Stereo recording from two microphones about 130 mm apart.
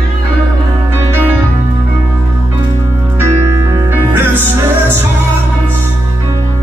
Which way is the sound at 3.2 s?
25° right (ahead or behind).